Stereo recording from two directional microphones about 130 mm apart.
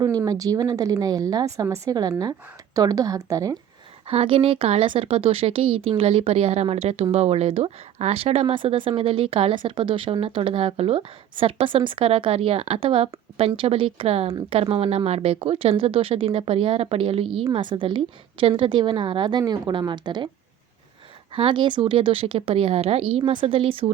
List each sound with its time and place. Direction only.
0.0 s speech: 30° right (ahead or behind)
4.0 s a woman's voice: 50° right (ahead or behind)
21.3 s speech: 40° right (ahead or behind)